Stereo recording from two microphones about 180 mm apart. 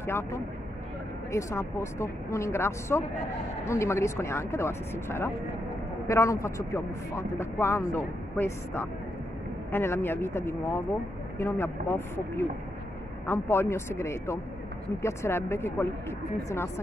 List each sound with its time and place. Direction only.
1.3 s speech: 15° left (ahead or behind)